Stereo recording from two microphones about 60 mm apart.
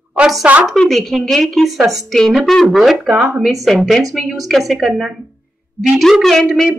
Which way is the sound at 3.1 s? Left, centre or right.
Right.